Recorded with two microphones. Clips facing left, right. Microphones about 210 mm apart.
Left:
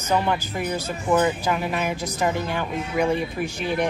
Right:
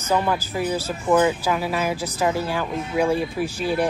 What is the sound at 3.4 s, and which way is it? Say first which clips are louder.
Speech: right 2 dB; 35° right (ahead or behind).